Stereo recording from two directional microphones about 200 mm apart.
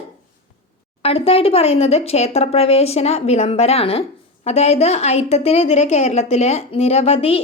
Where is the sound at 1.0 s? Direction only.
30° left (ahead or behind).